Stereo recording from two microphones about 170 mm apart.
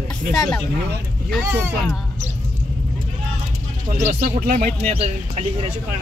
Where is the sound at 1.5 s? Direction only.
15° right (ahead or behind).